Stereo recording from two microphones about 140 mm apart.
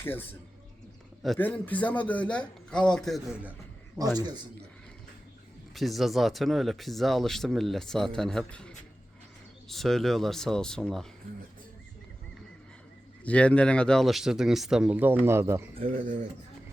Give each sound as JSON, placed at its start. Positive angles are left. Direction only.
{"t": 0.0, "sound": "a man's voice", "side_deg": 15}
{"t": 1.4, "sound": "a man's voice", "side_deg": 15}
{"t": 4.2, "sound": "a man's voice", "side_deg": -30}
{"t": 5.7, "sound": "speech", "side_deg": 0}
{"t": 13.2, "sound": "speech", "side_deg": 10}
{"t": 15.9, "sound": "speech", "side_deg": -65}